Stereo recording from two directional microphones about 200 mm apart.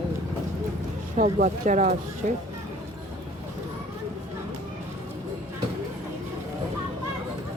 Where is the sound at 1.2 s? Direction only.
45° right (ahead or behind).